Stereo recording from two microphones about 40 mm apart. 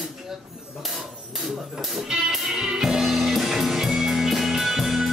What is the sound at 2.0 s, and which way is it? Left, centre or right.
Music, centre.